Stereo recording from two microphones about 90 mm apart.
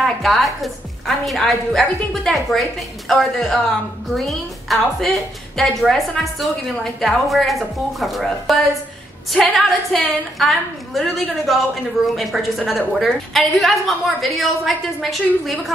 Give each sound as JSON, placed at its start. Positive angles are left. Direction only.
{"t": 0.0, "sound": "a woman's voice", "side_deg": 0}